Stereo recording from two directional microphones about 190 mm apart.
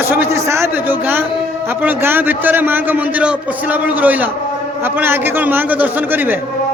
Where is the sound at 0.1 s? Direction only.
10° right (ahead or behind).